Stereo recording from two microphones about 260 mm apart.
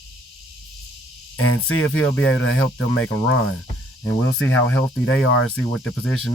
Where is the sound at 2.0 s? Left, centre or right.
Centre.